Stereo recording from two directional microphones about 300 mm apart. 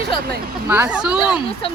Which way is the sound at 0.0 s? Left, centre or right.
Right.